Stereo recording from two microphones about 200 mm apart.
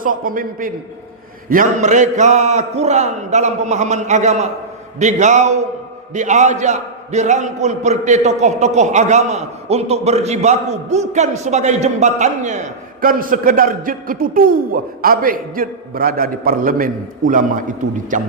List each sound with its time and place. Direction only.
0.0 s a man's voice: 45° right (ahead or behind)